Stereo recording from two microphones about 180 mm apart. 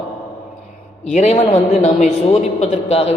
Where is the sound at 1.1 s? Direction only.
40° left (ahead or behind).